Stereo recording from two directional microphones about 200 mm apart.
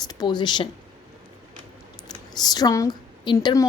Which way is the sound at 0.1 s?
20° left (ahead or behind).